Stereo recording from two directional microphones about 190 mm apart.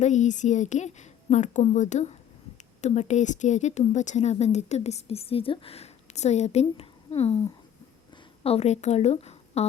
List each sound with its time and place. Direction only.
0.0 s speech: 40° left (ahead or behind)